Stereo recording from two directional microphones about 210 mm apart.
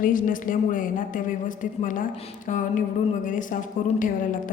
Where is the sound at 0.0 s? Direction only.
40° left (ahead or behind).